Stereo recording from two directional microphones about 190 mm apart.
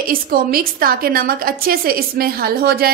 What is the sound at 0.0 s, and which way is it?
A woman's voice, 50° right (ahead or behind).